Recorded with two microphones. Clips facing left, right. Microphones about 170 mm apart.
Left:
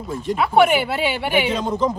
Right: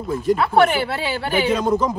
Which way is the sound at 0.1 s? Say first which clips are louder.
Right 1 dB; centre (ahead or behind).